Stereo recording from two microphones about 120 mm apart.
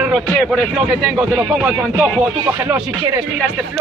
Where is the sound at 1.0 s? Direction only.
5° right (ahead or behind).